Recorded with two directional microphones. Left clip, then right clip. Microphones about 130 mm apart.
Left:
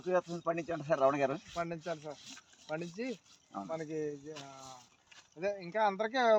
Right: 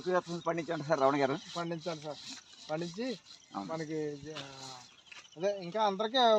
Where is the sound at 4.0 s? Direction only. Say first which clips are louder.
Right 1 dB; 15° right (ahead or behind).